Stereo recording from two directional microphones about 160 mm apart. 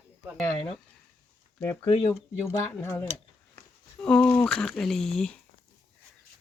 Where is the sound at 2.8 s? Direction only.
15° left (ahead or behind).